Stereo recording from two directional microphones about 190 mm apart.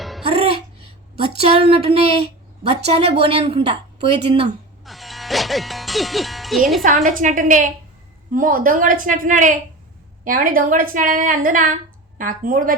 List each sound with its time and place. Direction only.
0.3 s music: 30° right (ahead or behind)
1.4 s a woman's voice: 30° right (ahead or behind)
4.9 s music: centre (ahead or behind)
6.8 s a woman's voice: 45° right (ahead or behind)